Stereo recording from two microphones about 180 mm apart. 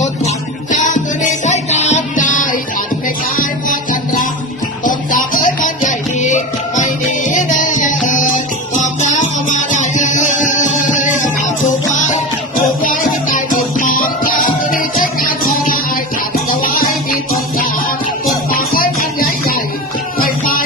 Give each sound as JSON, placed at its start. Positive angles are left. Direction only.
{"t": 0.0, "sound": "music", "side_deg": 40}
{"t": 18.5, "sound": "music", "side_deg": 55}